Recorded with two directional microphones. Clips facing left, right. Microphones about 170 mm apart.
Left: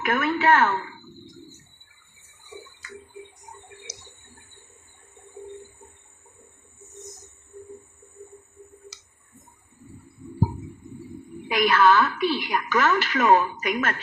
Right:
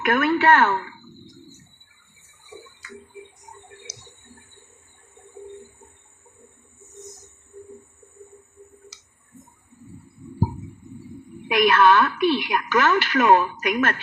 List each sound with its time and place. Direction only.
0.0 s a woman's voice: 70° right (ahead or behind)
11.5 s a woman's voice: 60° right (ahead or behind)